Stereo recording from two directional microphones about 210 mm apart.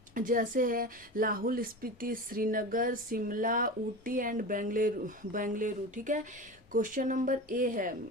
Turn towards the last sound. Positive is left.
turn(degrees=-40)  # may be behind; listen again after turning